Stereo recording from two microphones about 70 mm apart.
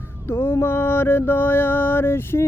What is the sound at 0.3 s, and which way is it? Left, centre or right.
Mantra, left.